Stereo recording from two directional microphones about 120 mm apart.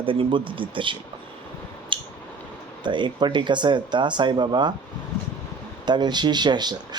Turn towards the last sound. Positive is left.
turn(degrees=-35)  # may be behind; listen again after turning